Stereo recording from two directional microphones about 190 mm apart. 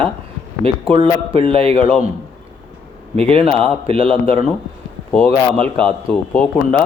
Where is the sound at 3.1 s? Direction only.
30° right (ahead or behind).